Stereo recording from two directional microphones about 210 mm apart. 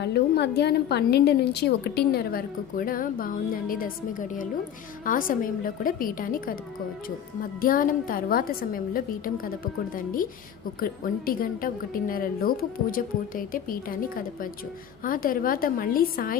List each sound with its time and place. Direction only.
0.0 s a woman's voice: 55° left (ahead or behind)
7.6 s a woman's voice: 40° left (ahead or behind)